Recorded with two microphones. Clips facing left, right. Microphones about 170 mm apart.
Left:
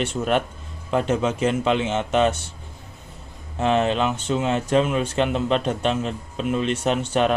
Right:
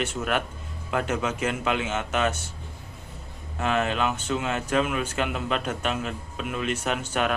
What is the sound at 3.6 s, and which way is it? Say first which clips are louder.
Speech: left 5 dB; 25° left (ahead or behind).